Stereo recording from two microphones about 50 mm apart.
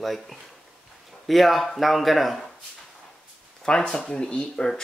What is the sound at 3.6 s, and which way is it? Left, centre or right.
Speech, centre.